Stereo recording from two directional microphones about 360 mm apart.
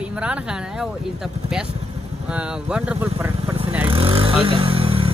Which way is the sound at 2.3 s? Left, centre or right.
Centre.